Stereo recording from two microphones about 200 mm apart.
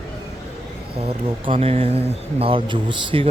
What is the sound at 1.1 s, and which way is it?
Speech, 25° right (ahead or behind).